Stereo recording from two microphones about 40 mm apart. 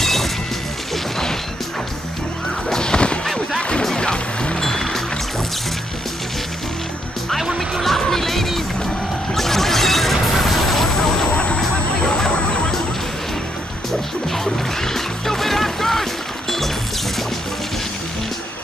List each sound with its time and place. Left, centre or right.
0.0 s music: centre
2.7 s a sound: centre
4.0 s music: left
4.6 s music: centre
7.8 s music: centre
11.2 s a sound: left
14.3 s music: centre